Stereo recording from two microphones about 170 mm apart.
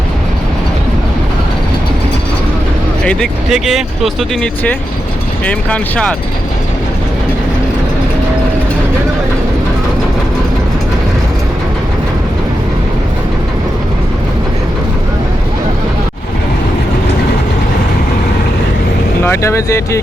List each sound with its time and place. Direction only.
3.0 s speech: 5° left (ahead or behind)
19.2 s speech: 15° left (ahead or behind)